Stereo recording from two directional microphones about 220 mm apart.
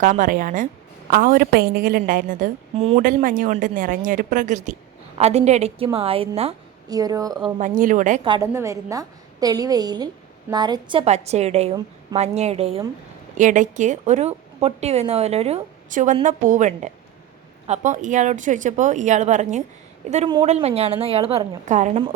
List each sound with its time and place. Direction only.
0.0 s a woman's voice: 35° right (ahead or behind)
2.7 s a woman's voice: 25° right (ahead or behind)
3.0 s a woman's voice: 40° right (ahead or behind); by 7.4 s 15° right (ahead or behind)
7.6 s a woman's voice: 35° right (ahead or behind)
8.2 s a woman's voice: 15° right (ahead or behind)